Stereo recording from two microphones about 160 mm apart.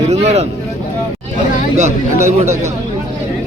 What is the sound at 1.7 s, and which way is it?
Speech, 45° right (ahead or behind).